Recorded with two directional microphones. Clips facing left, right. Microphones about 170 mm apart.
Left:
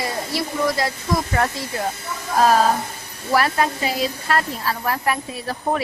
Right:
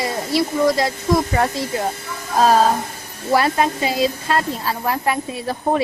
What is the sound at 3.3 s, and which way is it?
A woman's voice, 25° right (ahead or behind).